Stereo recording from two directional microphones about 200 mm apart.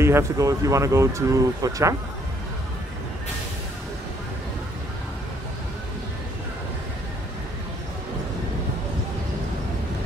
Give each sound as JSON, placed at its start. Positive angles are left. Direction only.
{"t": 0.0, "sound": "speech", "side_deg": -15}